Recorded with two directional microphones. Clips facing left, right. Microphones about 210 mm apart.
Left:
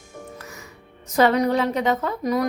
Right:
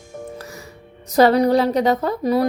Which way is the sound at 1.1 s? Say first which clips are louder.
Right 4 dB; 35° right (ahead or behind).